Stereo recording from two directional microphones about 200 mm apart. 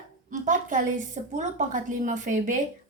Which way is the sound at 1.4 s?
40° right (ahead or behind).